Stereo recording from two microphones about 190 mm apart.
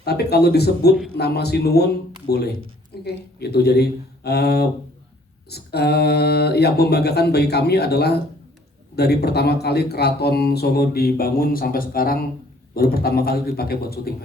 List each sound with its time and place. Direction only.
0.0 s a man's voice: 55° left (ahead or behind)